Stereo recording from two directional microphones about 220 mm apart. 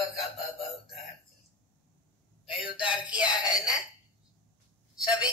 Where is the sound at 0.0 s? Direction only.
Centre (ahead or behind).